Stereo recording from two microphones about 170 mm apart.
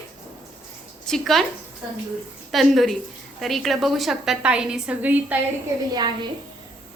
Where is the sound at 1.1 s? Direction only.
Centre (ahead or behind).